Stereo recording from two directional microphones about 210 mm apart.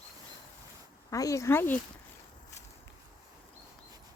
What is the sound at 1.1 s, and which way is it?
Speech, 15° left (ahead or behind).